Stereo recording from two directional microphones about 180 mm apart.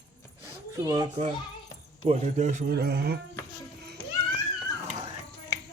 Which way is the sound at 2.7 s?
60° right (ahead or behind).